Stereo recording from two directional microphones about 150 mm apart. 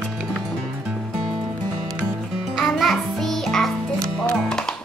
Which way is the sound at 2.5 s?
Centre (ahead or behind).